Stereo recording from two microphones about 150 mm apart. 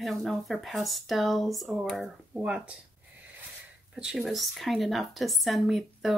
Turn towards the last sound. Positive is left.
turn(degrees=0)  # may be behind; listen again after turning